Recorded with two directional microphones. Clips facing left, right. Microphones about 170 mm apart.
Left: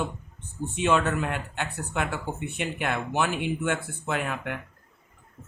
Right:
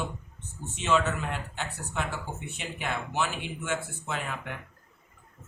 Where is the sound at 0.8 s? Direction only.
55° left (ahead or behind).